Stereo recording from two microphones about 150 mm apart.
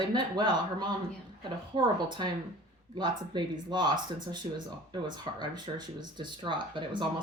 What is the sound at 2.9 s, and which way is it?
Speech, 30° right (ahead or behind).